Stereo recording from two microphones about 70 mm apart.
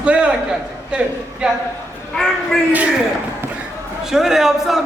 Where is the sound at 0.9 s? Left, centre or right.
Centre.